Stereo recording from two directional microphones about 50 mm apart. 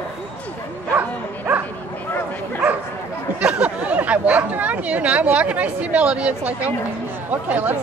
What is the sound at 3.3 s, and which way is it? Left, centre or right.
Speech, right.